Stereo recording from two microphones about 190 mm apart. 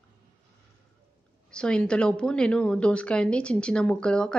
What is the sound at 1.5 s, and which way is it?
A woman's voice, 5° left (ahead or behind).